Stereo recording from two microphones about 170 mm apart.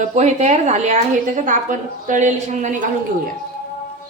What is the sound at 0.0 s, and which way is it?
A woman's voice, 40° right (ahead or behind).